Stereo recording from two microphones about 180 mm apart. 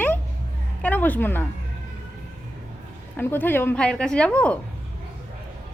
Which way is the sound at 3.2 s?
10° left (ahead or behind).